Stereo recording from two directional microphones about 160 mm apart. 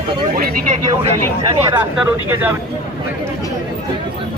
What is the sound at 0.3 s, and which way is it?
Speech, 55° right (ahead or behind).